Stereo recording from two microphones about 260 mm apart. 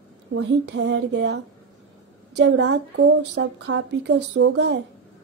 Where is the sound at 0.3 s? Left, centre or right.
Right.